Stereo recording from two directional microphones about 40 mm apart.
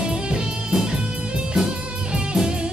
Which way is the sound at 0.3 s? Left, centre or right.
Centre.